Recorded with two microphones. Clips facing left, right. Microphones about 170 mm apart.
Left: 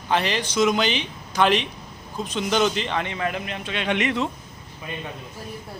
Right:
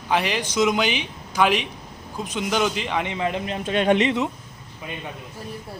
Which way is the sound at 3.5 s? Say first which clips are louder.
Right 7 dB; 45° right (ahead or behind).